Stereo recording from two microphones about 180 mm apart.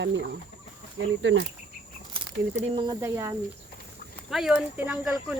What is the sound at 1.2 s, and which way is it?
Speech, 90° right.